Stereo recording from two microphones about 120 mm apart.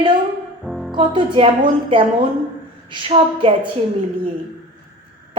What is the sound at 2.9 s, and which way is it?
Speech, 45° right (ahead or behind).